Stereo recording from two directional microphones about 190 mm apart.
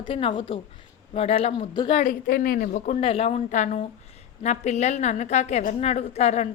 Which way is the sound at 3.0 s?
30° left (ahead or behind).